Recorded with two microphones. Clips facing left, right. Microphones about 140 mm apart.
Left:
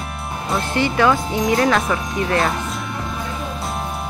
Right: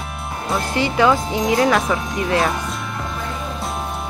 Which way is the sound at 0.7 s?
15° right (ahead or behind).